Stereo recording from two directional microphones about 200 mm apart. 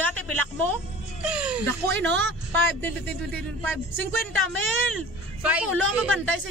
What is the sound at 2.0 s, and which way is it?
Speech, 60° right (ahead or behind).